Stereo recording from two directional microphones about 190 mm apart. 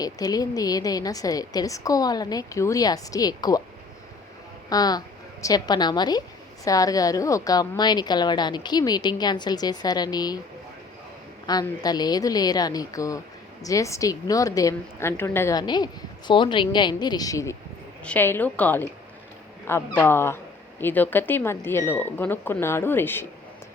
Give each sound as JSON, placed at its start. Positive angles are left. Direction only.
{"t": 0.0, "sound": "a woman's voice", "side_deg": 20}
{"t": 4.7, "sound": "a woman's voice", "side_deg": 20}
{"t": 11.4, "sound": "a woman's voice", "side_deg": 20}